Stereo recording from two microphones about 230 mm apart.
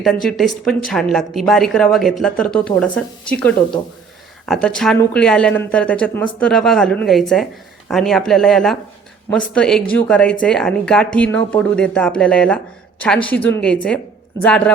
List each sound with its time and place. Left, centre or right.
0.0 s a woman's voice: centre